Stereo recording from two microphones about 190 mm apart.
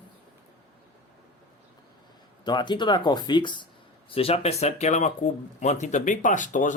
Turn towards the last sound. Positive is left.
turn(degrees=40)  # may be behind; listen again after turning